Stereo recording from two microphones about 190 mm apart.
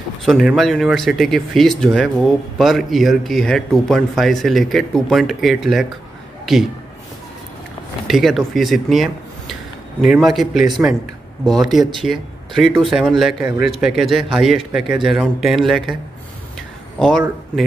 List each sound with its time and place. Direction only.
0.2 s speech: centre (ahead or behind)
8.1 s speech: centre (ahead or behind)